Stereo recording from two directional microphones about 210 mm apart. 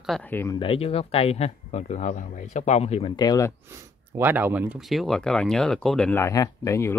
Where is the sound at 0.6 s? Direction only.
25° left (ahead or behind).